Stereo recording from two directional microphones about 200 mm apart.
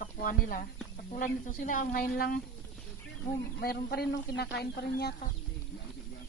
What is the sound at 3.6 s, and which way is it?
Speech, 50° left (ahead or behind).